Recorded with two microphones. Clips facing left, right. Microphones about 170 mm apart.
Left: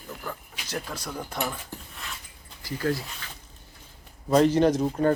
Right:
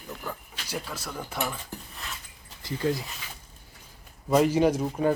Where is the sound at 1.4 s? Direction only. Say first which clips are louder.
Right 1 dB; 5° left (ahead or behind).